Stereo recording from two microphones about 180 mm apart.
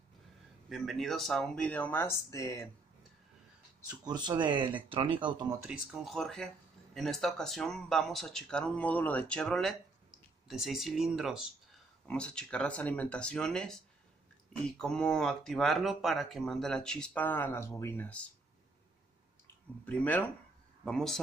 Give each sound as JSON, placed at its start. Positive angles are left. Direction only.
{"t": 0.7, "sound": "speech", "side_deg": 0}
{"t": 4.0, "sound": "speech", "side_deg": -25}
{"t": 5.6, "sound": "speech", "side_deg": -5}
{"t": 19.9, "sound": "speech", "side_deg": 10}